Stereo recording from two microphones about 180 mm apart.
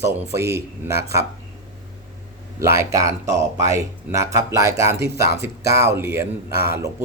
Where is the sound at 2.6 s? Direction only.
15° right (ahead or behind).